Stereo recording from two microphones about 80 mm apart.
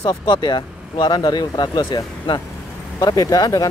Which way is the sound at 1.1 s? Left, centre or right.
Left.